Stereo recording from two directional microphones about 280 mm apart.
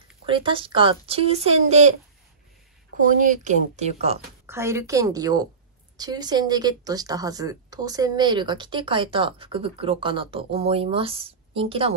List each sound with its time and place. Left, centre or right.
0.3 s speech: centre
3.2 s speech: right
4.5 s a woman's voice: centre